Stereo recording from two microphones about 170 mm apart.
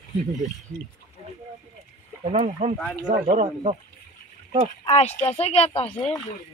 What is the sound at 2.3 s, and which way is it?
Speech, 35° right (ahead or behind).